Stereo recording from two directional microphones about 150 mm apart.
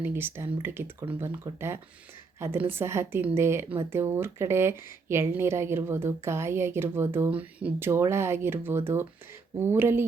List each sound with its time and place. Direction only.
0.0 s speech: 15° right (ahead or behind)